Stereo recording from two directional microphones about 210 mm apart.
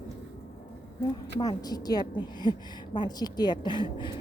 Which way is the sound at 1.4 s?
20° left (ahead or behind).